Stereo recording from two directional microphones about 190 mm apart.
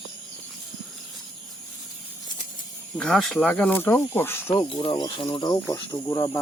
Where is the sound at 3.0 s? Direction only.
Centre (ahead or behind).